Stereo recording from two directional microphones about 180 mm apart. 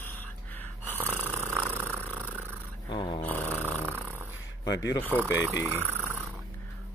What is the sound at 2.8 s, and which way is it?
Snoring, 25° left (ahead or behind).